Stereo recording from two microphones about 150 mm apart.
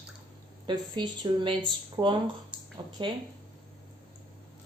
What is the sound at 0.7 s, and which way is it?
Speech, 30° right (ahead or behind).